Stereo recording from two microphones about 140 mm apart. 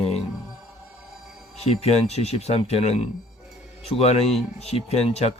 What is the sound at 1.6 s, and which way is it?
Speech, 50° left (ahead or behind).